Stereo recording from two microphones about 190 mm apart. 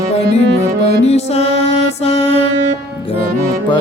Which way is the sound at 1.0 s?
35° left (ahead or behind).